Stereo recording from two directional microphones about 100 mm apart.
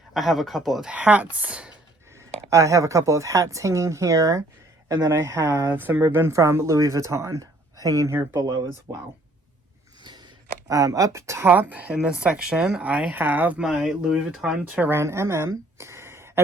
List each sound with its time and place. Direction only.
0.1 s speech: centre (ahead or behind)
2.1 s speech: 30° right (ahead or behind)
10.0 s a sound: 50° right (ahead or behind)
10.7 s speech: 35° right (ahead or behind); by 14.8 s 10° right (ahead or behind)
14.8 s a woman's voice: 25° right (ahead or behind)